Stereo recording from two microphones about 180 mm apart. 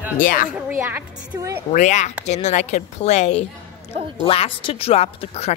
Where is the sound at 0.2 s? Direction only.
50° left (ahead or behind).